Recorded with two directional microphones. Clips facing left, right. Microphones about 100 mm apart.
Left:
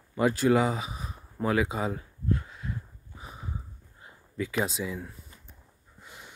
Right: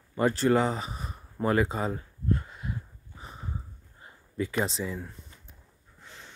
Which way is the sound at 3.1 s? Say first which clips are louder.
Even; 5° left (ahead or behind).